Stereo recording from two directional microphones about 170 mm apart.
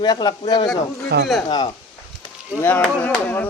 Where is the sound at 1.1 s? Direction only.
75° right (ahead or behind).